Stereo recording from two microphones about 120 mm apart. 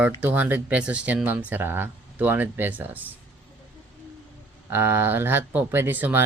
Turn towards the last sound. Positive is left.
turn(degrees=-15)  # may be behind; listen again after turning